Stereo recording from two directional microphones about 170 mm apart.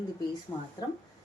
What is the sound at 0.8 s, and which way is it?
Speech, 25° left (ahead or behind).